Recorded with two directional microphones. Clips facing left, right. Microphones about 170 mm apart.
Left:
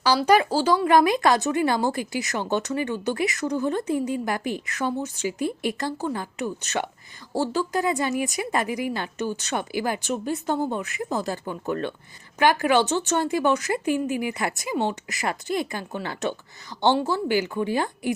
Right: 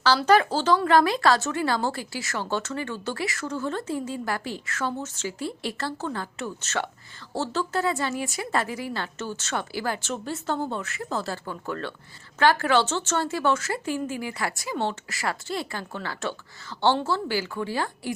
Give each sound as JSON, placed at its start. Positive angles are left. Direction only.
{"t": 0.0, "sound": "speech", "side_deg": 10}